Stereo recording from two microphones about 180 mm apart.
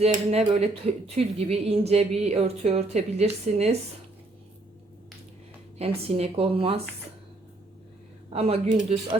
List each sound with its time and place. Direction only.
0.0 s speech: 35° right (ahead or behind)
5.8 s speech: 35° right (ahead or behind)
8.3 s speech: 35° right (ahead or behind)